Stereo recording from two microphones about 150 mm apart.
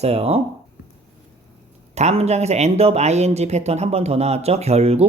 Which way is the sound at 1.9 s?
45° right (ahead or behind).